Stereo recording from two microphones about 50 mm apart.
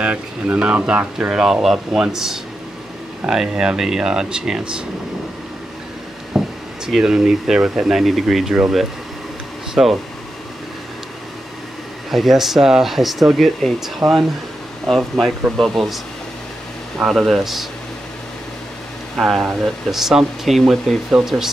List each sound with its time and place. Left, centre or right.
0.0 s speech: right
1.3 s speech: centre
6.4 s a sound: centre
6.9 s speech: centre
9.8 s speech: centre
12.1 s speech: centre
17.0 s speech: centre
19.1 s speech: centre